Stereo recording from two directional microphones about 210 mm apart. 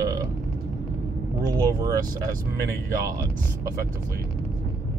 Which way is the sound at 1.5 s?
15° right (ahead or behind).